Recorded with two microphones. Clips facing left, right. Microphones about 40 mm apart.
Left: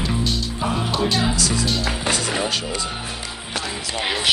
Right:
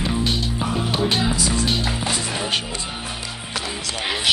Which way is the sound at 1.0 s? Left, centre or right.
Right.